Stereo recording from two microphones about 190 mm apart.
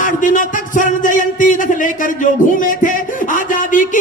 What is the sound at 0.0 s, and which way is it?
Music, 45° left (ahead or behind).